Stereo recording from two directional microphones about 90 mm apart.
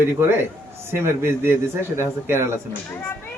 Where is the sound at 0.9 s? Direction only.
25° right (ahead or behind).